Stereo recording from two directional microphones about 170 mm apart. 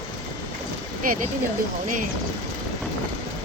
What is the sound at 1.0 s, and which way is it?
Speech, 55° right (ahead or behind).